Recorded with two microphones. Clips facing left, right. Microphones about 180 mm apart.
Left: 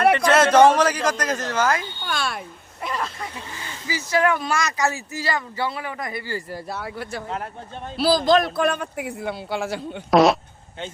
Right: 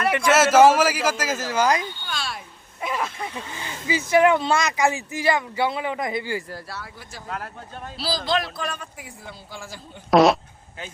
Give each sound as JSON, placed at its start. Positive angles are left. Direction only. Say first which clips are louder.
{"t": 0.3, "sound": "speech", "louder": "right 2 dB", "side_deg": -5}
{"t": 2.0, "sound": "a sound", "louder": "left 5 dB", "side_deg": 55}
{"t": 2.8, "sound": "speech", "louder": "right 1 dB", "side_deg": -10}
{"t": 3.8, "sound": "speech", "louder": "right 4 dB", "side_deg": -20}
{"t": 6.7, "sound": "speech", "louder": "left 8 dB", "side_deg": 65}
{"t": 7.3, "sound": "speech", "louder": "left 3 dB", "side_deg": 25}
{"t": 7.9, "sound": "speech", "louder": "left 8 dB", "side_deg": 55}
{"t": 10.1, "sound": "speech", "louder": "even", "side_deg": 0}